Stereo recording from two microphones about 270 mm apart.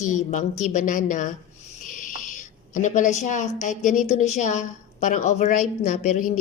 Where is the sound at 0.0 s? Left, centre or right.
Left.